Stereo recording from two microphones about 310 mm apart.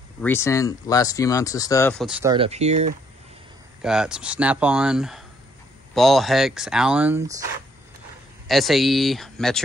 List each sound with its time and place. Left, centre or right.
0.2 s speech: centre
2.3 s speech: centre
3.8 s speech: centre
8.5 s speech: centre